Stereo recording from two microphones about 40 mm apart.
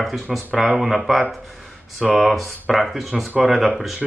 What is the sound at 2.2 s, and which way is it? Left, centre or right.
Speech, centre.